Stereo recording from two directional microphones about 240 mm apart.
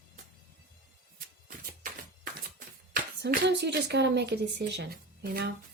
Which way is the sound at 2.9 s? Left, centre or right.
Right.